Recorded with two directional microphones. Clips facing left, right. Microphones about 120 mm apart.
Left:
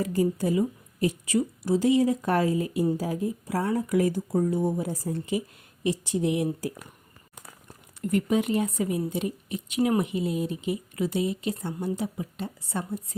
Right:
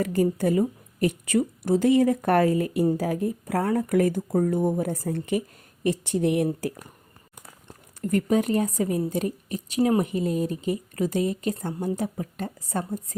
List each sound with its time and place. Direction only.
0.0 s a woman's voice: 60° right (ahead or behind)
8.0 s speech: 40° right (ahead or behind)